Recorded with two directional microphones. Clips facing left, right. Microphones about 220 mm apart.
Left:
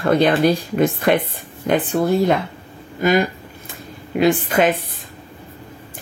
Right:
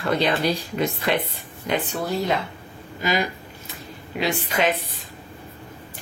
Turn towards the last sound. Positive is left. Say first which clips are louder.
# left 6 dB
turn(degrees=50)  # may be behind; listen again after turning